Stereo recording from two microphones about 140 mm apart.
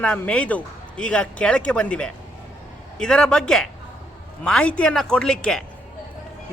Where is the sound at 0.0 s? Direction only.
10° left (ahead or behind).